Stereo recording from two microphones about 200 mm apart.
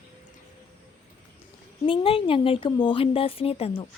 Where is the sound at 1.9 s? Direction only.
25° left (ahead or behind).